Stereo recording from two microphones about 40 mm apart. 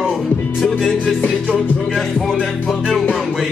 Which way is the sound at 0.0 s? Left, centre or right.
Centre.